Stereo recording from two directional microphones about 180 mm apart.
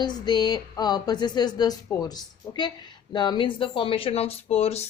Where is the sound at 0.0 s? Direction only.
25° left (ahead or behind).